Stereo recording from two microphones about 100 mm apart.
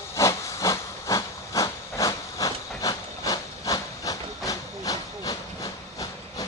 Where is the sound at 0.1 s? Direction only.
30° left (ahead or behind).